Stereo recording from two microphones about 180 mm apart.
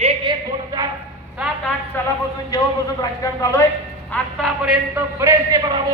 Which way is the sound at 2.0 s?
10° left (ahead or behind).